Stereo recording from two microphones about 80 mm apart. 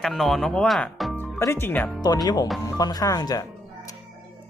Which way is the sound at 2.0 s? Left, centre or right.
Left.